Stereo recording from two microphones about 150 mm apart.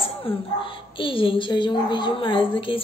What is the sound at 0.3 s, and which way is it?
A woman's voice, 35° left (ahead or behind).